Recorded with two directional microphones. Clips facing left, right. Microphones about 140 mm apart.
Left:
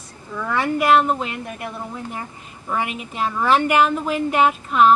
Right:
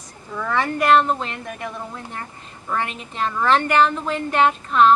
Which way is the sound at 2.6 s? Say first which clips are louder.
Left 1 dB; 10° left (ahead or behind).